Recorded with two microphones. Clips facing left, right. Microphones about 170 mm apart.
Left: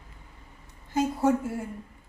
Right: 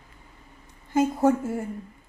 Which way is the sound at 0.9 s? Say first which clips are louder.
Right 3 dB; 50° right (ahead or behind).